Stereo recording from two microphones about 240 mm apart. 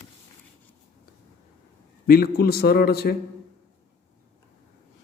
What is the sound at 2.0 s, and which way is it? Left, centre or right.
A man's voice, left.